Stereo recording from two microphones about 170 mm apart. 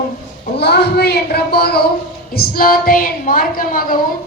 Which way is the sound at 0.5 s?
75° left (ahead or behind).